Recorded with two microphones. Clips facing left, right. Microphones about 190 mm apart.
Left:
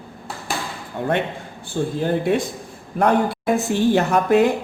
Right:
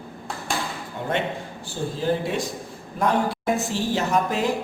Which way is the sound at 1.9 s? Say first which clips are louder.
Left 4 dB; 55° left (ahead or behind).